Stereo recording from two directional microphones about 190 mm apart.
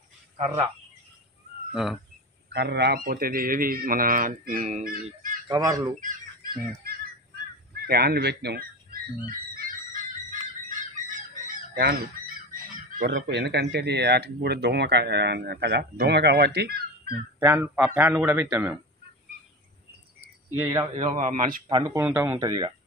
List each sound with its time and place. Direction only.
1.7 s speech: centre (ahead or behind)
2.5 s a man's voice: 60° right (ahead or behind); by 4.9 s 40° right (ahead or behind)
4.9 s a sound: 45° right (ahead or behind)
5.5 s speech: 20° right (ahead or behind)
5.9 s fowl: 50° right (ahead or behind)
11.1 s fowl: 45° right (ahead or behind)
13.0 s speech: 65° right (ahead or behind)
17.4 s a man's voice: 10° right (ahead or behind)
20.6 s speech: 20° right (ahead or behind)
21.2 s a man's voice: 45° right (ahead or behind)
21.6 s speech: 25° right (ahead or behind)
22.0 s a man's voice: 10° right (ahead or behind)